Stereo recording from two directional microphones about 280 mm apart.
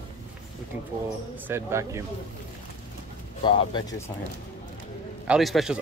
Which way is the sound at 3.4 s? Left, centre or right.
Centre.